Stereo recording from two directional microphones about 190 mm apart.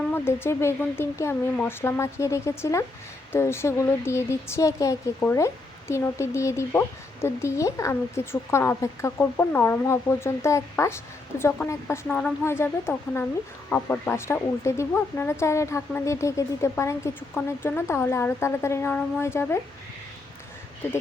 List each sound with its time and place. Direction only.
0.1 s speech: 10° left (ahead or behind)